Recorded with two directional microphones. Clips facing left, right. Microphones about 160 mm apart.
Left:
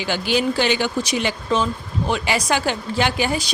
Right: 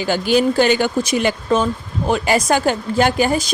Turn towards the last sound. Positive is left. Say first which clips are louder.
# right 5 dB
turn(degrees=-45)  # may be behind; listen again after turning